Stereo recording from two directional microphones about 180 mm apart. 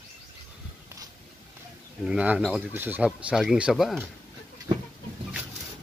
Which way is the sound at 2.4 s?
5° right (ahead or behind).